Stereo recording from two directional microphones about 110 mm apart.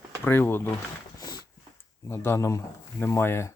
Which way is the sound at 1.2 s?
40° left (ahead or behind).